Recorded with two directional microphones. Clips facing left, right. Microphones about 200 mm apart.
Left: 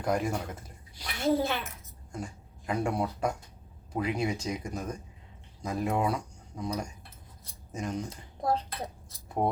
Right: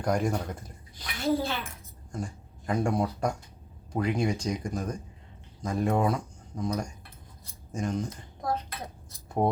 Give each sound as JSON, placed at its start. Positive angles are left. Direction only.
{"t": 0.0, "sound": "speech", "side_deg": 5}
{"t": 0.9, "sound": "speech", "side_deg": 15}
{"t": 2.1, "sound": "speech", "side_deg": 5}
{"t": 8.4, "sound": "speech", "side_deg": 30}